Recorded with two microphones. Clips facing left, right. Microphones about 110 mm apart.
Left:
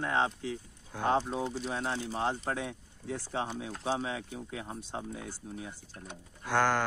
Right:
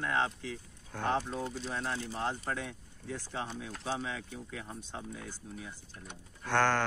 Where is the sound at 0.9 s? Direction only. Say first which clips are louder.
Left 3 dB; 10° left (ahead or behind).